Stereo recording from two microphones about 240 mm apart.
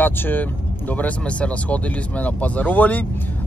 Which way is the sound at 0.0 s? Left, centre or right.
Centre.